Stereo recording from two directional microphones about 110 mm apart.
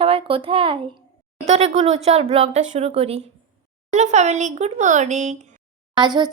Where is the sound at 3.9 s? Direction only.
90° right.